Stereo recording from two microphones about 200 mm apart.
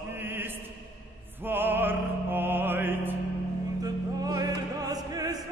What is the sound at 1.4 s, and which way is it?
Music, 10° right (ahead or behind).